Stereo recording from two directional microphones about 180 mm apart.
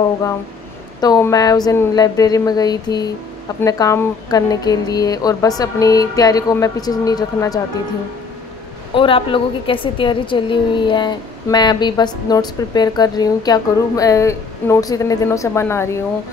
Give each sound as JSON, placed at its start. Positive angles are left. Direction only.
{"t": 1.0, "sound": "a woman's voice", "side_deg": 20}
{"t": 8.9, "sound": "a woman's voice", "side_deg": 30}